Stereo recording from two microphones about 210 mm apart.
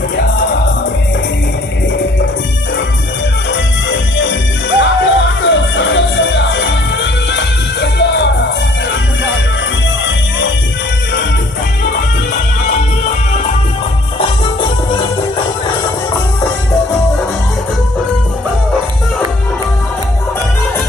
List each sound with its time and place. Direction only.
3.5 s music: 60° left (ahead or behind)